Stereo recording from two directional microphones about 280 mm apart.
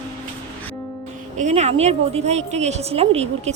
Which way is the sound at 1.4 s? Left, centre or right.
Right.